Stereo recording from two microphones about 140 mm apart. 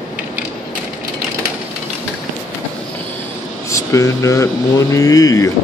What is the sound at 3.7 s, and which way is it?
Speech, 20° left (ahead or behind).